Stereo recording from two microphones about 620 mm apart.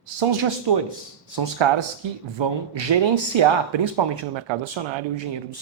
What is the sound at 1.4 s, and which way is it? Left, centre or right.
Speech, right.